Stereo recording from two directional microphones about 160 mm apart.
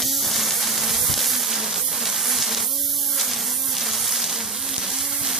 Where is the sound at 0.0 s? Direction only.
Centre (ahead or behind).